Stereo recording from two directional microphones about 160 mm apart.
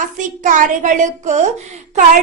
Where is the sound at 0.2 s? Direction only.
50° right (ahead or behind).